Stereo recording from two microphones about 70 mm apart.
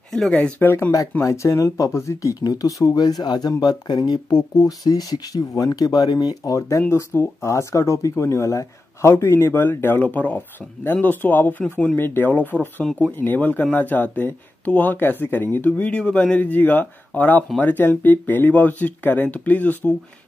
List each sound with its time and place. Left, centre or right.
0.1 s speech: centre
0.6 s speech: left
1.2 s speech: left
2.4 s speech: left
6.9 s speech: left